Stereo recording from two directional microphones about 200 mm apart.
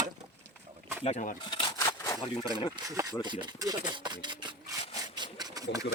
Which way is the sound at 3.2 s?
20° right (ahead or behind).